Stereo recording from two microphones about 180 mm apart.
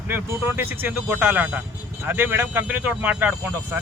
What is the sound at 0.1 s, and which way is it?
Speech, 10° right (ahead or behind).